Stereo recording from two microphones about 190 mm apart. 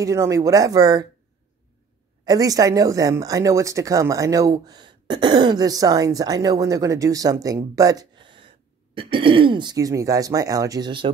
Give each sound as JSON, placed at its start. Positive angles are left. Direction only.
{"t": 0.0, "sound": "speech", "side_deg": -15}
{"t": 2.2, "sound": "speech", "side_deg": -20}